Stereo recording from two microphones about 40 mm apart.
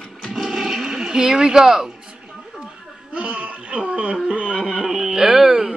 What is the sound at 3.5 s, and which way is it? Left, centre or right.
Speech, right.